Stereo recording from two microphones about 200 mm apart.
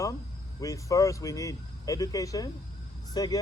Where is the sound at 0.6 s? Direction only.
15° left (ahead or behind).